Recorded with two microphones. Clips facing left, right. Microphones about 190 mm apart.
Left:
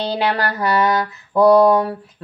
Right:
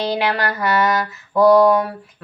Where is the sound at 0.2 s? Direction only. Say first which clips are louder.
Left 1 dB; 35° left (ahead or behind).